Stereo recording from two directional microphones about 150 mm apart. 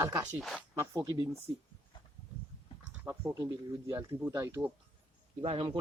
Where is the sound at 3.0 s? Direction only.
10° right (ahead or behind).